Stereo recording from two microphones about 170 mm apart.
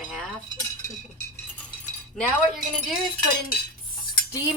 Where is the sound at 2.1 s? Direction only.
Centre (ahead or behind).